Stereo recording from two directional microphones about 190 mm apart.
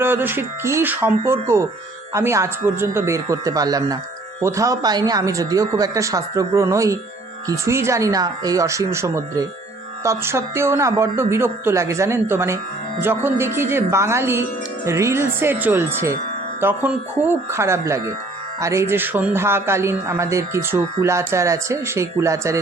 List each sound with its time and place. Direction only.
0.0 s speech: 10° right (ahead or behind)